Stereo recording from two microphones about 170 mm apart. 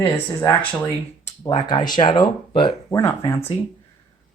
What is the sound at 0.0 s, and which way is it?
Speech, 10° left (ahead or behind).